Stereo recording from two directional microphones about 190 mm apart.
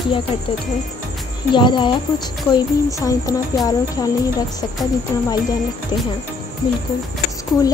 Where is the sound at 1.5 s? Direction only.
25° left (ahead or behind).